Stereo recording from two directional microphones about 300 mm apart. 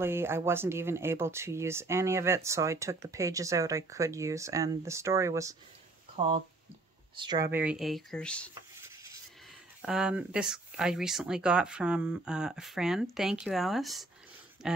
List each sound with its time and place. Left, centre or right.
0.0 s speech: centre
7.2 s speech: centre
7.5 s speech: centre
9.8 s speech: centre